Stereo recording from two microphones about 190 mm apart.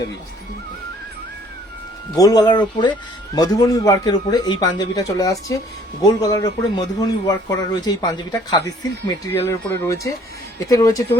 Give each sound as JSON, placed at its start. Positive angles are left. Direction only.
{"t": 2.1, "sound": "speech", "side_deg": 20}